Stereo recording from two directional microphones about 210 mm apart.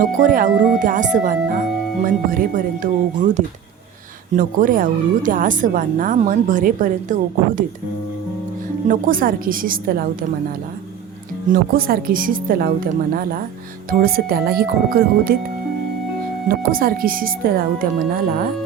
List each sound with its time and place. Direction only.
0.0 s speech: 40° right (ahead or behind)
8.9 s speech: 40° right (ahead or behind)
11.4 s speech: 45° right (ahead or behind)
16.5 s speech: 45° right (ahead or behind)